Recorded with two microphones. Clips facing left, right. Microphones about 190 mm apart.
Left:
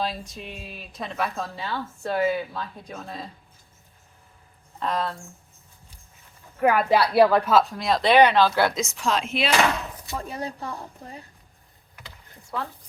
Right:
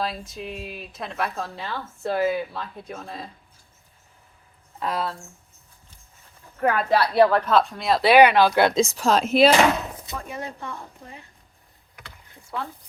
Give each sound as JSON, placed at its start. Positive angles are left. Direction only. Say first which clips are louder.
{"t": 0.0, "sound": "speech", "louder": "right 1 dB", "side_deg": 0}
{"t": 4.8, "sound": "a woman's voice", "louder": "even", "side_deg": -5}
{"t": 6.6, "sound": "a woman's voice", "louder": "left 1 dB", "side_deg": 10}
{"t": 10.2, "sound": "speech", "louder": "left 1 dB", "side_deg": 35}
{"t": 12.5, "sound": "speech", "louder": "even", "side_deg": 0}